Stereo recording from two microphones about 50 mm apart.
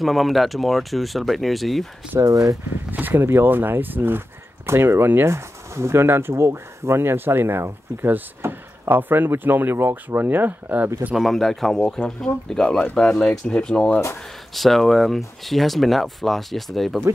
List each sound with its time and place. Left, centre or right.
0.0 s speech: centre
2.9 s speech: right
4.6 s speech: right
5.3 s speech: right
6.0 s speech: right
11.1 s speech: centre
14.5 s speech: centre